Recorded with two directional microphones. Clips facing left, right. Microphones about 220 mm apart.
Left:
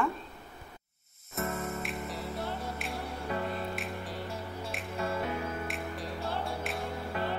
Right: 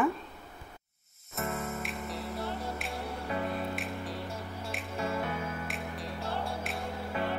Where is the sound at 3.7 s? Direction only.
Centre (ahead or behind).